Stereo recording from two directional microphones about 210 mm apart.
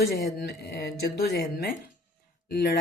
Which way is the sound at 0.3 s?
50° left (ahead or behind).